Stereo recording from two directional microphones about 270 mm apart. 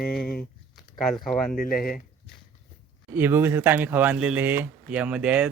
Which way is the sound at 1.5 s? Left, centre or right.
Left.